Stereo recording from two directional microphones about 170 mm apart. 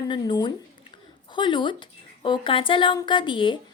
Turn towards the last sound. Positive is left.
turn(degrees=30)  # may be behind; listen again after turning